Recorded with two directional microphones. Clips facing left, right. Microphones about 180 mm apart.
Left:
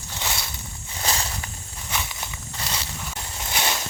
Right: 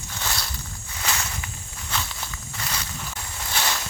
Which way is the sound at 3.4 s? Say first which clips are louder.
Left 1 dB; 20° left (ahead or behind).